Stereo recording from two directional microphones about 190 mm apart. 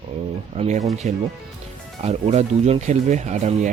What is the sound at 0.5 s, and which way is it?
Speech, 35° right (ahead or behind).